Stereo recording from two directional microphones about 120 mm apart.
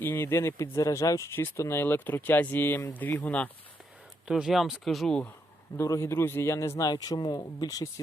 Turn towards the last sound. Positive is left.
turn(degrees=30)  # may be behind; listen again after turning